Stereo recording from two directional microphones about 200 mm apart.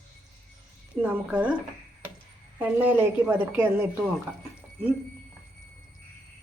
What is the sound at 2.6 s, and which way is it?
A woman's voice, 5° right (ahead or behind).